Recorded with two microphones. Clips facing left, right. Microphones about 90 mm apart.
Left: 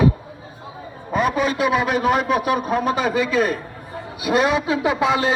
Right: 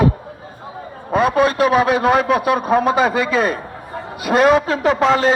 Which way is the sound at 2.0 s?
85° right.